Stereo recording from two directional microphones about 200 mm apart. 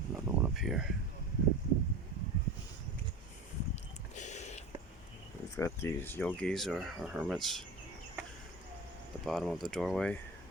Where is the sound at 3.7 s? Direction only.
35° left (ahead or behind).